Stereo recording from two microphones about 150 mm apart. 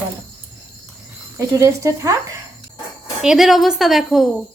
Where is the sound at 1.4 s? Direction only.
20° right (ahead or behind).